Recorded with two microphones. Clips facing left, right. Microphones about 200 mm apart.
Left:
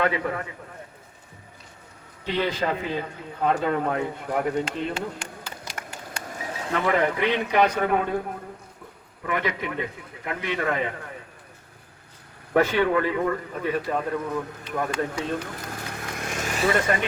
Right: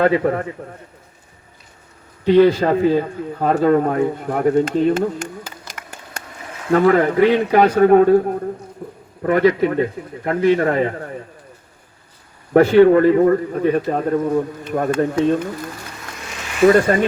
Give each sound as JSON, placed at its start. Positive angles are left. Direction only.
{"t": 0.0, "sound": "a man's voice", "side_deg": -40}
{"t": 2.2, "sound": "a man's voice", "side_deg": -50}
{"t": 12.5, "sound": "a man's voice", "side_deg": -45}
{"t": 15.9, "sound": "vehicle", "side_deg": 55}
{"t": 16.6, "sound": "a man's voice", "side_deg": -45}